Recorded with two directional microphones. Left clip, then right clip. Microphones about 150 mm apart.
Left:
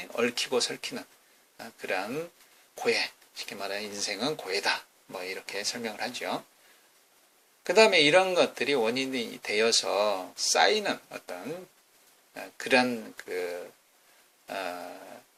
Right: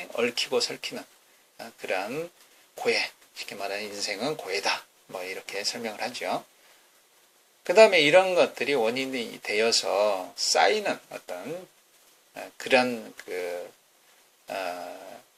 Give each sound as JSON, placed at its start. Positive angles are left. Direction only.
{"t": 0.0, "sound": "speech", "side_deg": 20}
{"t": 7.6, "sound": "speech", "side_deg": 15}
{"t": 14.4, "sound": "a sound", "side_deg": 15}